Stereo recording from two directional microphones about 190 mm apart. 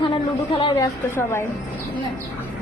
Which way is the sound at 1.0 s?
15° left (ahead or behind).